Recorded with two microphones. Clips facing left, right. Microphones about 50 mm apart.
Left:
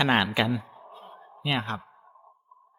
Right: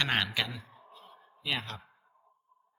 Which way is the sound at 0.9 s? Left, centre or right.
Left.